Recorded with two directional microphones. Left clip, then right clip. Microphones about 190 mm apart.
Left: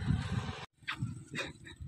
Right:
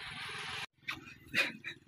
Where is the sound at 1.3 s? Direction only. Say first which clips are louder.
Right 9 dB; centre (ahead or behind).